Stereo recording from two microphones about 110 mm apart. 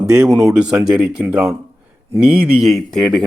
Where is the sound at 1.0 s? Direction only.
10° right (ahead or behind).